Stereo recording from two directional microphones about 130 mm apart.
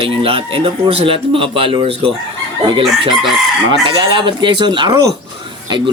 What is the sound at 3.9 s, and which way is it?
A man's voice, 35° right (ahead or behind).